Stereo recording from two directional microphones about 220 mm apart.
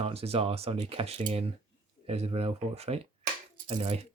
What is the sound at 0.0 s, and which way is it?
Speech, 25° right (ahead or behind).